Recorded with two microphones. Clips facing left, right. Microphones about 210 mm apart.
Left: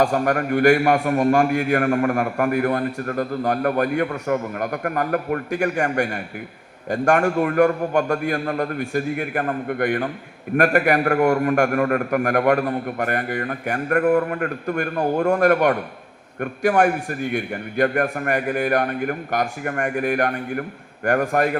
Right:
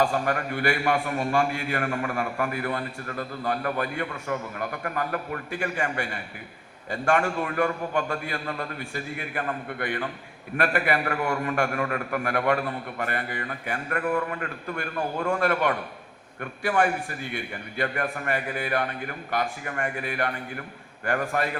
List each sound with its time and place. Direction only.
0.0 s a man's voice: 45° left (ahead or behind)